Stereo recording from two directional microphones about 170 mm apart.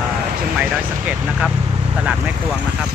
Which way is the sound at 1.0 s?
10° right (ahead or behind).